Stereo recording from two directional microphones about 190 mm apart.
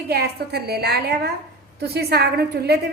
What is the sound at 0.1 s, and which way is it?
A woman's voice, 55° right (ahead or behind).